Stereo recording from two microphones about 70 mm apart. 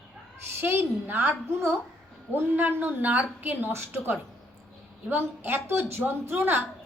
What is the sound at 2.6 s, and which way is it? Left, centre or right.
A woman's voice, right.